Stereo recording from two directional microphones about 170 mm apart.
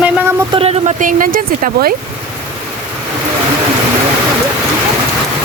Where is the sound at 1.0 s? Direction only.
50° right (ahead or behind).